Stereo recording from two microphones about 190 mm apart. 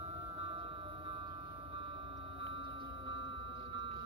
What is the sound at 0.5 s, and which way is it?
Music, 30° right (ahead or behind).